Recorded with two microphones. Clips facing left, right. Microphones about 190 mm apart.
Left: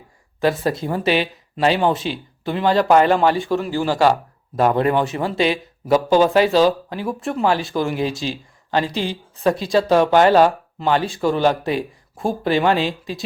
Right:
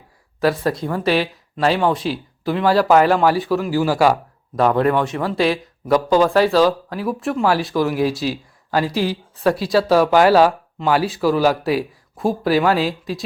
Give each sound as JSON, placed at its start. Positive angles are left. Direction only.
{"t": 0.4, "sound": "speech", "side_deg": 0}
{"t": 0.8, "sound": "speech", "side_deg": 25}
{"t": 1.0, "sound": "speech", "side_deg": 0}
{"t": 6.9, "sound": "speech", "side_deg": 0}